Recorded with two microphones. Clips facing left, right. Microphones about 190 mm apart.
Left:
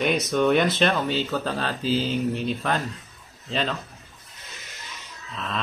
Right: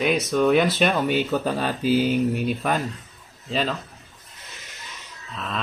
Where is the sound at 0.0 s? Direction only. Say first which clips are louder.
Right 1 dB; centre (ahead or behind).